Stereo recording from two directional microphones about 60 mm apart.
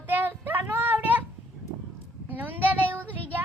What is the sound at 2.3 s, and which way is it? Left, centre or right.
Speech, right.